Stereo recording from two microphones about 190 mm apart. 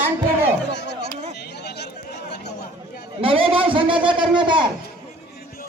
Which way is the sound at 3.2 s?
30° right (ahead or behind).